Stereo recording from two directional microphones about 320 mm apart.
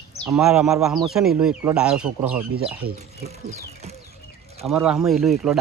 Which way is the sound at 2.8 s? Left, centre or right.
Right.